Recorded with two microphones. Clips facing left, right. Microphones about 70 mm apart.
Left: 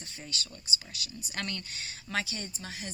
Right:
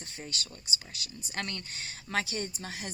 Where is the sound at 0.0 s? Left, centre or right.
Right.